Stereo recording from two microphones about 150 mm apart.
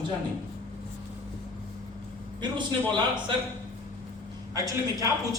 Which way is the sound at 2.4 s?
30° right (ahead or behind).